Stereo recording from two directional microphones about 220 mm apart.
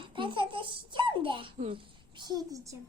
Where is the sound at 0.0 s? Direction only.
20° right (ahead or behind).